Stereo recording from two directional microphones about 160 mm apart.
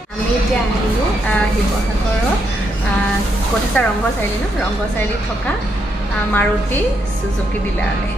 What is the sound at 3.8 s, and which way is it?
Speech, 10° left (ahead or behind).